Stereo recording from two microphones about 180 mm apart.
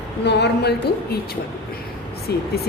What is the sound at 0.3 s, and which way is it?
Speech, 70° left (ahead or behind).